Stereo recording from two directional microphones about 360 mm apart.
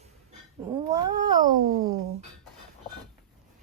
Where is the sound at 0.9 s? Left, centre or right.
Centre.